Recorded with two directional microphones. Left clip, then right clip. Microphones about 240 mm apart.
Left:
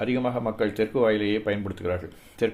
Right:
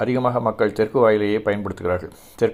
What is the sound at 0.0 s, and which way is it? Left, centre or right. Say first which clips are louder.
Speech: right 6 dB; right.